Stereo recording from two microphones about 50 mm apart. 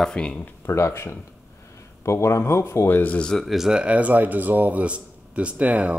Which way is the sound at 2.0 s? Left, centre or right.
Left.